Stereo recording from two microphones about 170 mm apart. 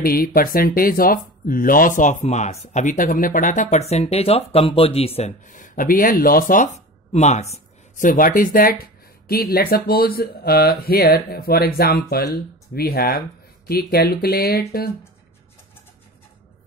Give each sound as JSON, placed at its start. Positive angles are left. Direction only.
{"t": 0.0, "sound": "speech", "side_deg": 60}